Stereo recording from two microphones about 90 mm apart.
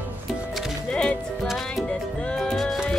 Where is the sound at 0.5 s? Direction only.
Centre (ahead or behind).